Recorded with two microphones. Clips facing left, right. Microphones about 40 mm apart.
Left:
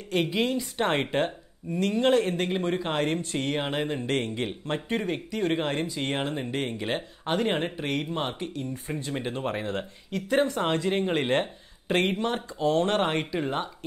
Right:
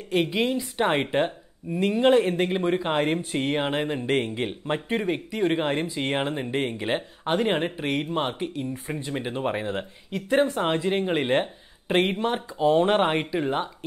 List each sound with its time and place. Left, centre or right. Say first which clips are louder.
0.1 s speech: right 2 dB; centre